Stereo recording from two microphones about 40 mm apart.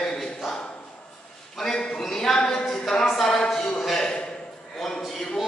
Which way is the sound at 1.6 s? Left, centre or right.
Centre.